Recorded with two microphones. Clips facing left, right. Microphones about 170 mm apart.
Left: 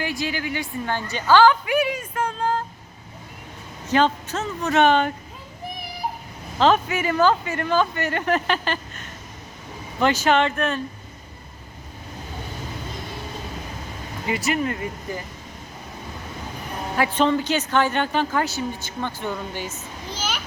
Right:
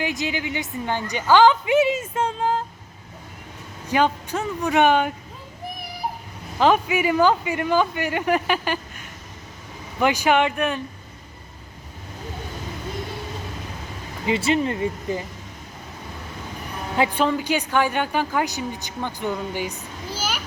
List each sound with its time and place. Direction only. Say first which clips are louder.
0.0 s a woman's voice: right 1 dB; 20° right (ahead or behind)
3.8 s a woman's voice: left 1 dB; 10° right (ahead or behind)
6.6 s a woman's voice: right 1 dB; 10° right (ahead or behind)
14.3 s speech: right 3 dB; 25° right (ahead or behind)
17.2 s a woman's voice: left 1 dB; 10° right (ahead or behind)